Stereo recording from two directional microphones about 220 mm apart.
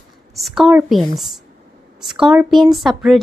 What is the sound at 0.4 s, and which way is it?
Speech, centre (ahead or behind).